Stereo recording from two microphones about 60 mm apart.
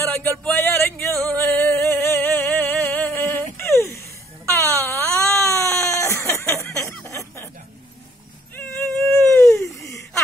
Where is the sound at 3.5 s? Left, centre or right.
Left.